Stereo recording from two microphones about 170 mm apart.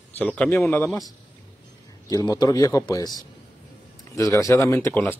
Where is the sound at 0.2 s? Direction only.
10° left (ahead or behind).